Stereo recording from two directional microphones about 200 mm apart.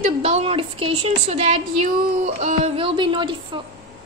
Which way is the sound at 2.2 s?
35° right (ahead or behind).